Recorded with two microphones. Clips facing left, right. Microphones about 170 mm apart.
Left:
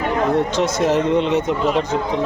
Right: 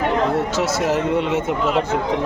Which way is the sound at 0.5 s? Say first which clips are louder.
Left 2 dB; 5° right (ahead or behind).